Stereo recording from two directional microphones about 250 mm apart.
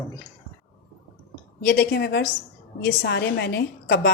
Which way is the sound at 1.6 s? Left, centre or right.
Left.